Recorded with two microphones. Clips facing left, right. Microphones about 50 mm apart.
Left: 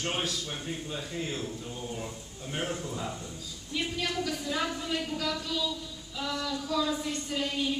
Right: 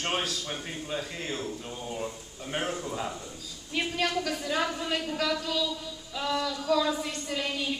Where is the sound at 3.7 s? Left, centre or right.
Right.